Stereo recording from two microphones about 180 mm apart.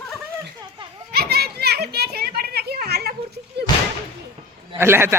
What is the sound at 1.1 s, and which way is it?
Children playing, 60° right (ahead or behind).